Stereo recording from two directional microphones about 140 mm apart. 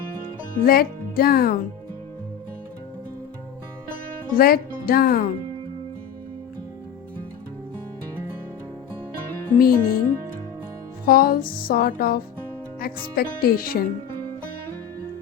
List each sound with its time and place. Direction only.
0.6 s music: 90° left
4.4 s music: 90° left
9.6 s music: 90° left
11.0 s music: 90° left